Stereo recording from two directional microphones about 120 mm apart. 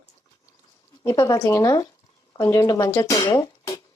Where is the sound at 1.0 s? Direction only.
30° left (ahead or behind).